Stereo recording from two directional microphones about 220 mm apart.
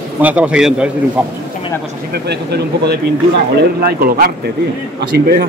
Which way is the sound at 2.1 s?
50° right (ahead or behind).